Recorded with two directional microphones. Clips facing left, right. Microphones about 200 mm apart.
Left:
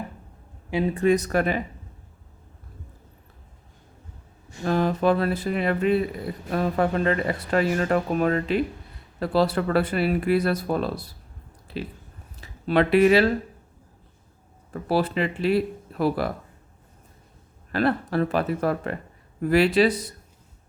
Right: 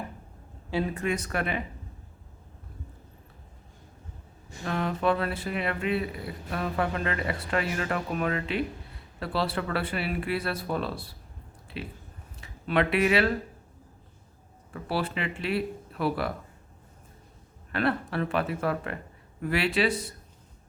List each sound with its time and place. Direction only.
0.7 s speech: 20° left (ahead or behind)
0.9 s speech: 35° left (ahead or behind)
4.6 s speech: 35° left (ahead or behind)
12.4 s speech: 35° left (ahead or behind)
14.7 s speech: 40° left (ahead or behind)
17.7 s speech: 40° left (ahead or behind)